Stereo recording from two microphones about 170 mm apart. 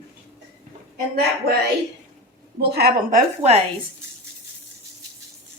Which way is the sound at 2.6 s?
70° right (ahead or behind).